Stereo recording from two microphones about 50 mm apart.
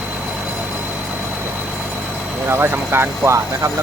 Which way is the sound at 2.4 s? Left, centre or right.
Right.